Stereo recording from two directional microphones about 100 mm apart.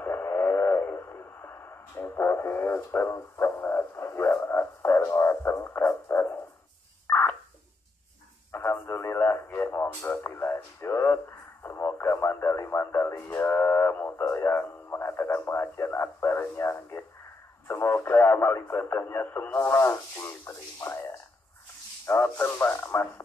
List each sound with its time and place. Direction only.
0.0 s radio: 20° left (ahead or behind)
7.1 s a sound: 25° left (ahead or behind)
8.5 s radio: 25° left (ahead or behind)